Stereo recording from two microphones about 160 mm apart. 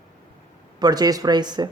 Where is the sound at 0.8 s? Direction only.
25° right (ahead or behind).